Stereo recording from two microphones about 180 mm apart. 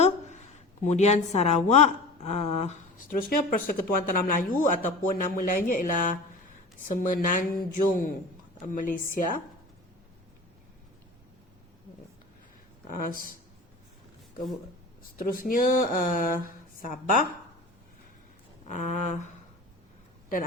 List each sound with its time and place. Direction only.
0.0 s a woman's voice: 40° left (ahead or behind)
12.9 s a woman's voice: 50° left (ahead or behind)
15.2 s a woman's voice: 50° left (ahead or behind)
18.7 s a sound: 40° left (ahead or behind)